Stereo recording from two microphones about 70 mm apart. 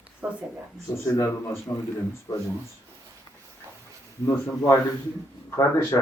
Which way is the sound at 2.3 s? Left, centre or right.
Left.